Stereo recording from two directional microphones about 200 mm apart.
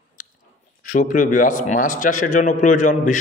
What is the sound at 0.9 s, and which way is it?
A man's voice, 40° left (ahead or behind).